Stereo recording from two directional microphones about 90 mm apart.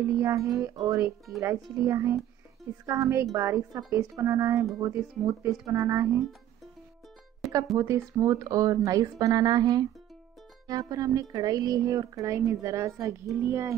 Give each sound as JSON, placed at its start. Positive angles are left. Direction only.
{"t": 0.0, "sound": "speech", "side_deg": -35}
{"t": 7.7, "sound": "speech", "side_deg": -35}